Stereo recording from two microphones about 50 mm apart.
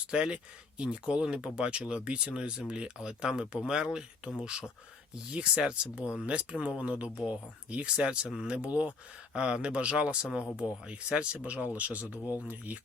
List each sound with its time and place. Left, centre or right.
0.1 s speech: centre; by 12.8 s right